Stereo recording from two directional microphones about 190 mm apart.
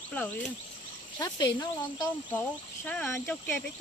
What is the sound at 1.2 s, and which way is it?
Speech, 20° left (ahead or behind).